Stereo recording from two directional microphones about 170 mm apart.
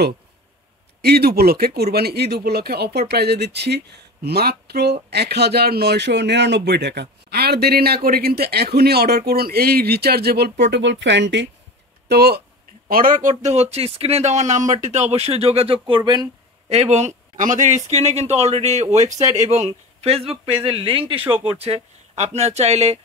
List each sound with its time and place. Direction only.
1.0 s speech: 65° right (ahead or behind)
10.6 s speech: 85° right
12.1 s speech: 70° right (ahead or behind)
12.8 s speech: 55° right (ahead or behind); by 15.8 s 35° right (ahead or behind)
16.0 s a sound: 25° right (ahead or behind)
16.7 s speech: 40° right (ahead or behind)